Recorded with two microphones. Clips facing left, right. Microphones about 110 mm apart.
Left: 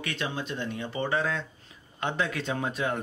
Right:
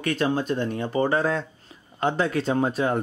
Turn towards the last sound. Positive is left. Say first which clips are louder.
# right 7 dB
turn(degrees=-35)  # may be behind; listen again after turning